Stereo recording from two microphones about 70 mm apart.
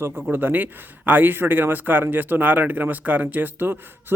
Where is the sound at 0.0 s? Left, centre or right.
Right.